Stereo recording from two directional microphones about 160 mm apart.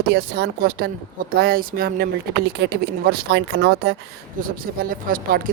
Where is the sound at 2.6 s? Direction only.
90° right.